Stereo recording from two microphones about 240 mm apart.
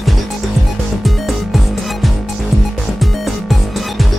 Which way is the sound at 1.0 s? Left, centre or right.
Centre.